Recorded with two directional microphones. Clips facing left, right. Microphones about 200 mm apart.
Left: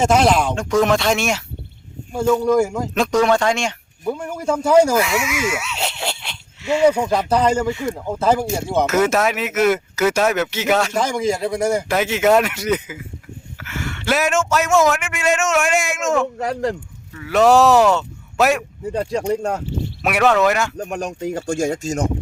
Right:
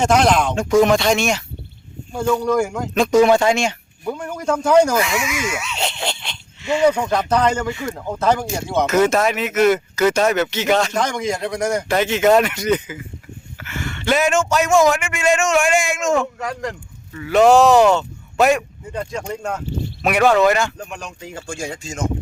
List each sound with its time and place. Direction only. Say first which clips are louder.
0.0 s speech: even; 5° left (ahead or behind)
4.0 s speech: left 1 dB; 10° left (ahead or behind)
16.4 s speech: left 5 dB; 30° left (ahead or behind)
17.2 s speech: right 1 dB; centre (ahead or behind)
19.3 s speech: left 5 dB; 35° left (ahead or behind)
20.0 s speech: right 1 dB; 5° left (ahead or behind)
20.7 s speech: left 7 dB; 45° left (ahead or behind)